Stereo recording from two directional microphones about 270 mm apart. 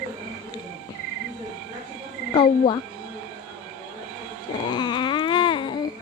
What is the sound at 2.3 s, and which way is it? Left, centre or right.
Speech, centre.